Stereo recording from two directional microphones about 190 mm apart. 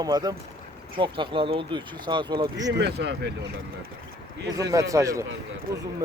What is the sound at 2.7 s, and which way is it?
Speech, 65° right (ahead or behind).